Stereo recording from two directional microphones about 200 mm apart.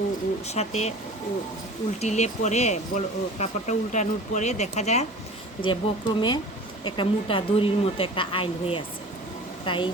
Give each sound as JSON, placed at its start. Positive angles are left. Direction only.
{"t": 0.4, "sound": "speech", "side_deg": 35}
{"t": 2.0, "sound": "speech", "side_deg": 35}
{"t": 5.6, "sound": "a woman's voice", "side_deg": 25}